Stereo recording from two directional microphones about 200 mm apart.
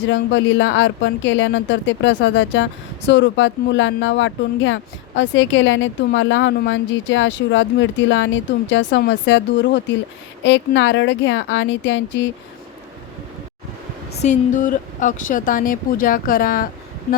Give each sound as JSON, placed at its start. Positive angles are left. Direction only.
{"t": 0.1, "sound": "speech", "side_deg": 65}
{"t": 14.2, "sound": "speech", "side_deg": 40}